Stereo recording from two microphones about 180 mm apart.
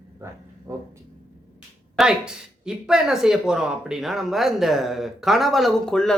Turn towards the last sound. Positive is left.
turn(degrees=5)  # may be behind; listen again after turning